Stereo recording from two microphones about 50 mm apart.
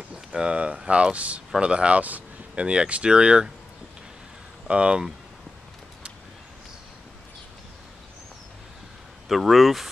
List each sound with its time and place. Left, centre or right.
0.1 s speech: centre
4.6 s speech: right
9.3 s speech: centre